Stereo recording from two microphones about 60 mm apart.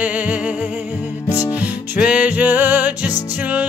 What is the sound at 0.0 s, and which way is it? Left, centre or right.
Music, right.